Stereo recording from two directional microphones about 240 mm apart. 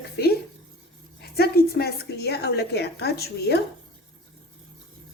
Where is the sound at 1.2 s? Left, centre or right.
Left.